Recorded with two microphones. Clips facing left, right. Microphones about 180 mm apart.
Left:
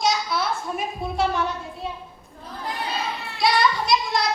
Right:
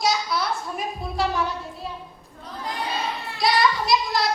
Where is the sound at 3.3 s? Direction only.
Centre (ahead or behind).